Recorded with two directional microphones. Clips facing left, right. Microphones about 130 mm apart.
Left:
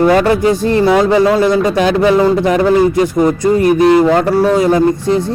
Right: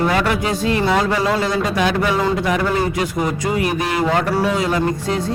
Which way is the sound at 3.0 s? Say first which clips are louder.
Left 9 dB; 45° left (ahead or behind).